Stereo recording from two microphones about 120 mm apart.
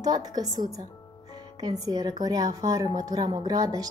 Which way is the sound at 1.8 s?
30° right (ahead or behind).